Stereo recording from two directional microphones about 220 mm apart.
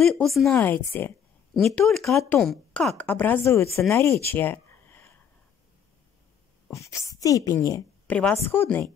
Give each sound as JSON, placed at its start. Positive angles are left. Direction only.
{"t": 0.0, "sound": "a woman's voice", "side_deg": 0}
{"t": 6.7, "sound": "a woman's voice", "side_deg": 15}